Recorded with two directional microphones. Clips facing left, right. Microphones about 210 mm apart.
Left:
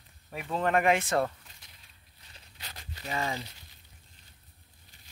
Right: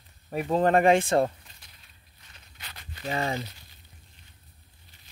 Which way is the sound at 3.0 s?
35° right (ahead or behind).